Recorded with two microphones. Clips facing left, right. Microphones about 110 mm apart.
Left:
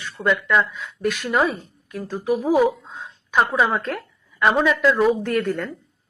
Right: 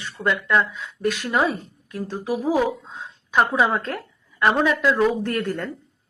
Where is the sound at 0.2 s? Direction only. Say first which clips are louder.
Left 1 dB; 15° left (ahead or behind).